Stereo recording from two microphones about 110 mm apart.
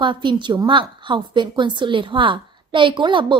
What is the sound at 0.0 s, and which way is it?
A woman's voice, 45° right (ahead or behind).